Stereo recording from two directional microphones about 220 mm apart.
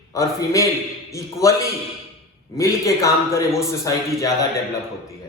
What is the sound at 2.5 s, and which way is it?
A man's voice, 15° left (ahead or behind).